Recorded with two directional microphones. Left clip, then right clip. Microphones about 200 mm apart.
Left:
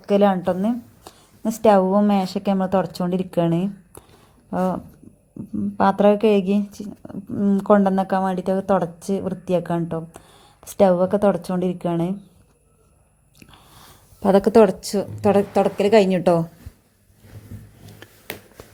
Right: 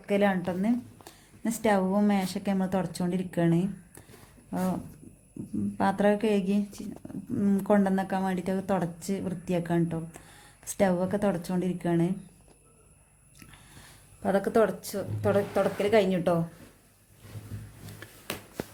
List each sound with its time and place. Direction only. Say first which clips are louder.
0.0 s a woman's voice: left 9 dB; 20° left (ahead or behind)
14.2 s a woman's voice: left 10 dB; 35° left (ahead or behind)
18.0 s a sound: left 3 dB; 15° left (ahead or behind)